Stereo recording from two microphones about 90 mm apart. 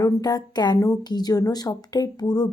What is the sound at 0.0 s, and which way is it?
Speech, 45° left (ahead or behind).